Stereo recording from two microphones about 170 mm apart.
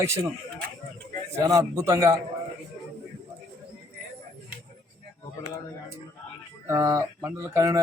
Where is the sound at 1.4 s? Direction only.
20° right (ahead or behind).